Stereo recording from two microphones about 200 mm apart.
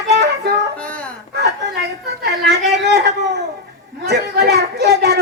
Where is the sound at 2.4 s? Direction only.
55° right (ahead or behind).